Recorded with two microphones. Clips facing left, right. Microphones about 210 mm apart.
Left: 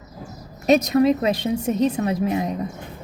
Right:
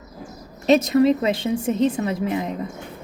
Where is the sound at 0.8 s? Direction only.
30° right (ahead or behind).